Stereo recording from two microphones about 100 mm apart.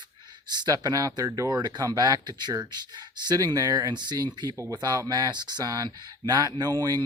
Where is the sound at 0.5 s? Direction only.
40° right (ahead or behind).